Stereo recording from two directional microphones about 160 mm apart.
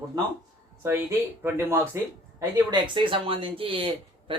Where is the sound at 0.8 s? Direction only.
15° right (ahead or behind).